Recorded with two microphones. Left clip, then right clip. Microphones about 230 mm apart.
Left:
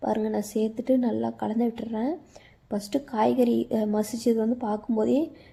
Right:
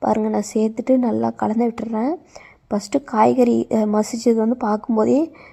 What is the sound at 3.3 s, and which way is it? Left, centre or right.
Speech, right.